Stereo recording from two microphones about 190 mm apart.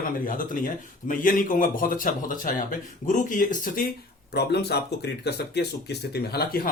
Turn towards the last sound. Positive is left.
turn(degrees=50)  # may be behind; listen again after turning